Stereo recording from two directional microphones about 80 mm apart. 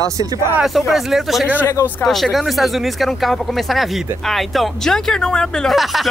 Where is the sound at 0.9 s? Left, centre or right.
Centre.